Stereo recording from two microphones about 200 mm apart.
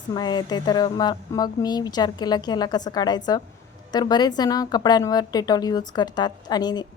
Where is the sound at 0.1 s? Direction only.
20° left (ahead or behind).